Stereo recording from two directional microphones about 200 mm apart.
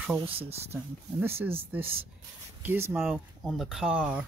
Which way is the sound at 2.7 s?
10° right (ahead or behind).